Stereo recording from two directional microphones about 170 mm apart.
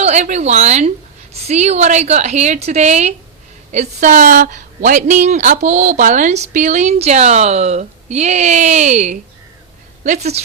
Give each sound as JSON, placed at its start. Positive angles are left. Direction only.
{"t": 0.0, "sound": "a woman's voice", "side_deg": -40}